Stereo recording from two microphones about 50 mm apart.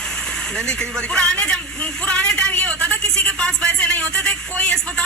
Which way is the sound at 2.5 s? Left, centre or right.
Left.